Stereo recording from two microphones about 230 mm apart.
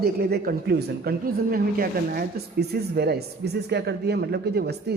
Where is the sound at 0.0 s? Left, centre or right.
Right.